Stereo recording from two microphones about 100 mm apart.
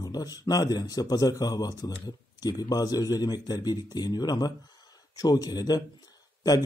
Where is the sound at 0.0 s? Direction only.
40° left (ahead or behind).